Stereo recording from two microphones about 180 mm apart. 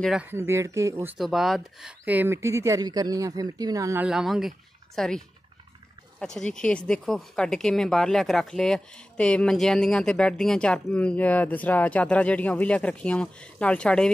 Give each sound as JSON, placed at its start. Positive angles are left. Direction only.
{"t": 0.0, "sound": "speech", "side_deg": -5}
{"t": 1.1, "sound": "speech", "side_deg": 0}
{"t": 4.0, "sound": "speech", "side_deg": 0}